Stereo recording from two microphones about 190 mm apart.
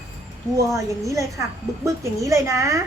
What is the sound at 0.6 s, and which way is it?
A woman's voice, 15° right (ahead or behind).